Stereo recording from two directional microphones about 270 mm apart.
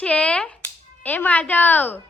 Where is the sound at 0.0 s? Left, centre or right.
Centre.